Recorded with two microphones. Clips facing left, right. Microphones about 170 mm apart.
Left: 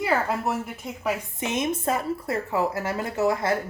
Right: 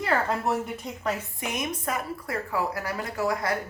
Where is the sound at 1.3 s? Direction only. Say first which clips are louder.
Left 5 dB; 25° left (ahead or behind).